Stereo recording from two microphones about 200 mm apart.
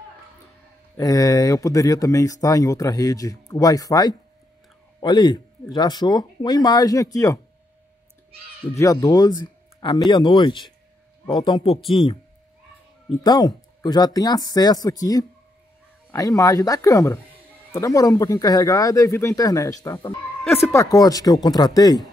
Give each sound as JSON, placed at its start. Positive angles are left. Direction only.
{"t": 0.9, "sound": "speech", "side_deg": 20}
{"t": 8.7, "sound": "speech", "side_deg": 15}
{"t": 11.8, "sound": "speech", "side_deg": 0}
{"t": 13.2, "sound": "speech", "side_deg": 20}